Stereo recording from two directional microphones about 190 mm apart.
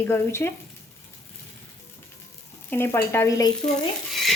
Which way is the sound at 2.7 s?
10° left (ahead or behind).